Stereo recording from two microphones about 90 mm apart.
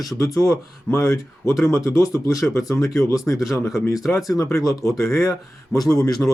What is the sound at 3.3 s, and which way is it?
Speech, 20° left (ahead or behind).